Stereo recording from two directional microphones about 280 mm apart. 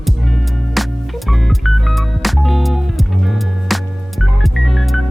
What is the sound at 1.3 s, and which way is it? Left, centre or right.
Music, centre.